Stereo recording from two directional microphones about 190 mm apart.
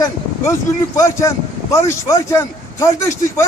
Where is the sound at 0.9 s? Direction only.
15° left (ahead or behind).